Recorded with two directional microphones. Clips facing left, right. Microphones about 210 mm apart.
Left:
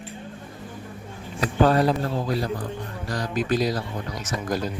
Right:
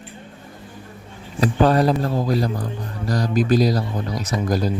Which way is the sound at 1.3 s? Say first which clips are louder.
Right 3 dB; 35° right (ahead or behind).